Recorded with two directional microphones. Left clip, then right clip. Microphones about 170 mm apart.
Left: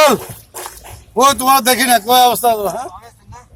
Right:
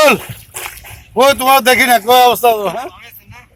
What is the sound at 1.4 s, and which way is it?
A man's voice, 20° right (ahead or behind).